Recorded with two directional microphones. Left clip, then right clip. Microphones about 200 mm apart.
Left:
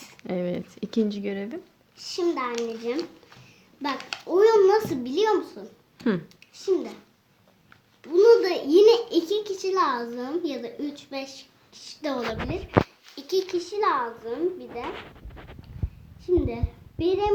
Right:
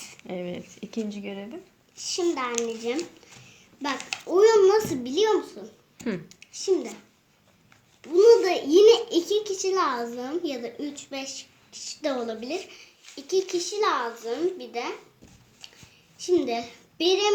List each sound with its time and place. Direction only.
0.2 s speech: 30° left (ahead or behind)
2.0 s a child's voice: 5° left (ahead or behind)
4.3 s a child's voice: 10° left (ahead or behind)
8.0 s a child's voice: 5° left (ahead or behind)
16.2 s a child's voice: centre (ahead or behind)